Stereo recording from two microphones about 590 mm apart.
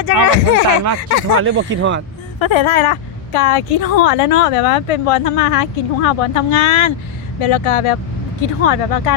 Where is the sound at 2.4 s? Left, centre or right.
Left.